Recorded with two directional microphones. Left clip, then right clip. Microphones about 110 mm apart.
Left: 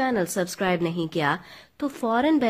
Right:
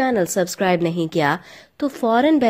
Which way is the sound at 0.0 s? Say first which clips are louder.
Right 6 dB; 30° right (ahead or behind).